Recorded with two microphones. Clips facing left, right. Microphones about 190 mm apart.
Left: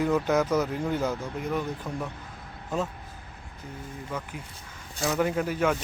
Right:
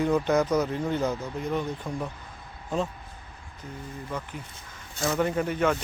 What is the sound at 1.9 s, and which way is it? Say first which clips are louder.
Speech: right 1 dB; 10° right (ahead or behind).